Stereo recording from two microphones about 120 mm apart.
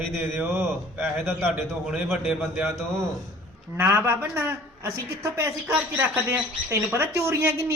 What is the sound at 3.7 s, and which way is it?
A woman's voice, 20° right (ahead or behind).